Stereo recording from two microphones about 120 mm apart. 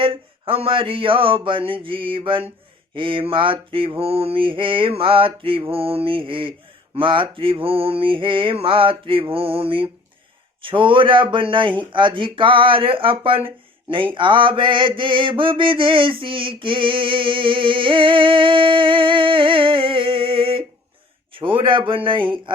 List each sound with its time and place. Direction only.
0.0 s mantra: 50° right (ahead or behind)